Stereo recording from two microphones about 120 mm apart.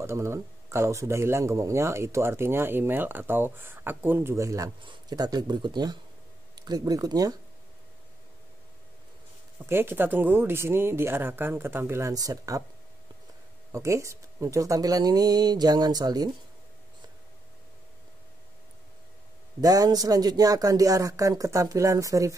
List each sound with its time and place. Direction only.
0.0 s a man's voice: 25° right (ahead or behind)
9.7 s a man's voice: 20° right (ahead or behind)
13.7 s speech: 25° right (ahead or behind)
19.6 s a man's voice: 30° right (ahead or behind)